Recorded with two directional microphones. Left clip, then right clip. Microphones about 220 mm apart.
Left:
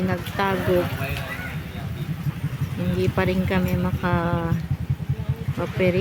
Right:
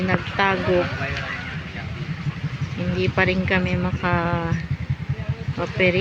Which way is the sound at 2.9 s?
15° left (ahead or behind).